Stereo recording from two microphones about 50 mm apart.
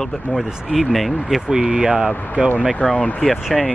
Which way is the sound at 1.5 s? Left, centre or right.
Centre.